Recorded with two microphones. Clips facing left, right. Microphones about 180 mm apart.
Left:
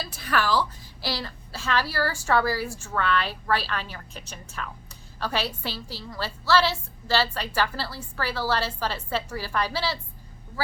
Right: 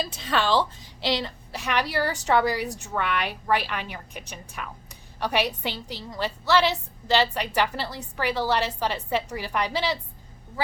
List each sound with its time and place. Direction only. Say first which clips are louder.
0.0 s a woman's voice: right 1 dB; 20° right (ahead or behind)